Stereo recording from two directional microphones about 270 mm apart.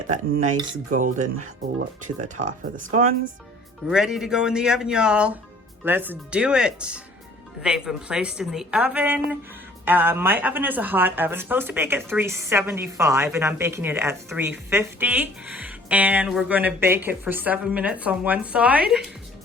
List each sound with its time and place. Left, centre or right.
0.1 s speech: right
3.8 s a woman's voice: centre